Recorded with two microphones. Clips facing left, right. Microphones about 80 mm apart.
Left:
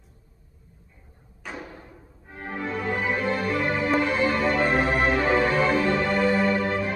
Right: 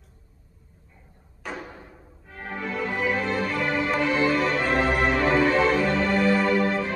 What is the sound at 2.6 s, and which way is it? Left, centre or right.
Music, left.